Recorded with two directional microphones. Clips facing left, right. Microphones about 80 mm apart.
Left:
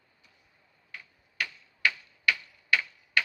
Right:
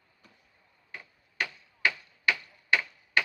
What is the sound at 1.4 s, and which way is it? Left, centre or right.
Tick-tock, right.